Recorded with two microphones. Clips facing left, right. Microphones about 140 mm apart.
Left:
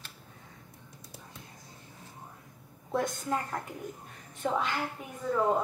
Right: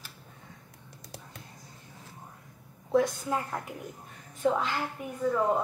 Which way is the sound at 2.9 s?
Centre (ahead or behind).